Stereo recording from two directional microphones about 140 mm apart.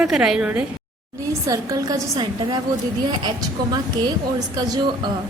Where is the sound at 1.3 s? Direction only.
25° right (ahead or behind).